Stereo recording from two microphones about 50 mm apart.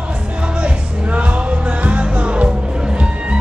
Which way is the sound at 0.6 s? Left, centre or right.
Right.